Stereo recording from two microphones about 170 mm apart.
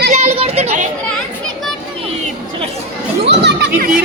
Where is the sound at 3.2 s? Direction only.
85° right.